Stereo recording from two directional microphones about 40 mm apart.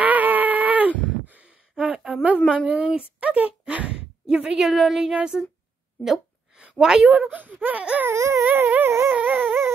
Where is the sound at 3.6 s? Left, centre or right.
Right.